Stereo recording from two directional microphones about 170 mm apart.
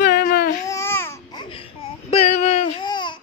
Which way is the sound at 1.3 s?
30° left (ahead or behind).